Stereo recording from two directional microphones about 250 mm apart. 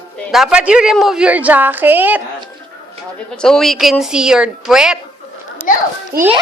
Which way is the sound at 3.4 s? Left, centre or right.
Centre.